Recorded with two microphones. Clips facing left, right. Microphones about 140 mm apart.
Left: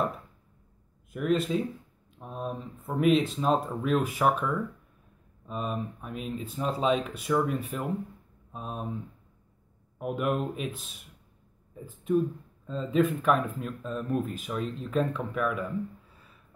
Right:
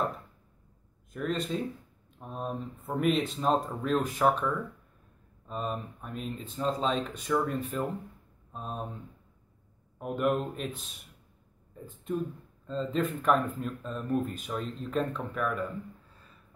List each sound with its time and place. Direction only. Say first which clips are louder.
1.1 s speech: left 5 dB; 5° left (ahead or behind)
5.5 s speech: left 2 dB; centre (ahead or behind)
9.9 s speech: even; 5° left (ahead or behind)